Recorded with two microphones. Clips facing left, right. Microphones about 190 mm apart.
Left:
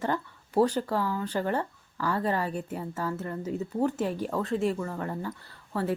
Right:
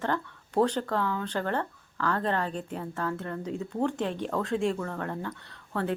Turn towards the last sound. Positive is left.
turn(degrees=5)  # may be behind; listen again after turning